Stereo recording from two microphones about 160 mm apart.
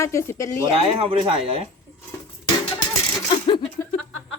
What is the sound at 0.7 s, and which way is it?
Speech, 35° right (ahead or behind).